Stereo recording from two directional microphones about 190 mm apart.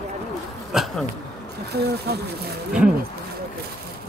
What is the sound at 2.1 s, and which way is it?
Speech, 55° right (ahead or behind).